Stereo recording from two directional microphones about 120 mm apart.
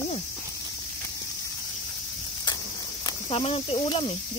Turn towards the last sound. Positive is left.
turn(degrees=40)  # may be behind; listen again after turning